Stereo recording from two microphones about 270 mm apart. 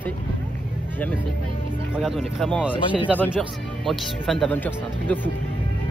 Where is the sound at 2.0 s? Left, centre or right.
Centre.